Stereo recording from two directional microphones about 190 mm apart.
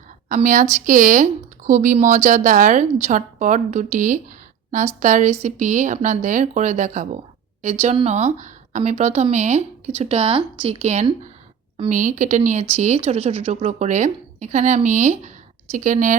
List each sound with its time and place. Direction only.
0.3 s speech: 45° right (ahead or behind)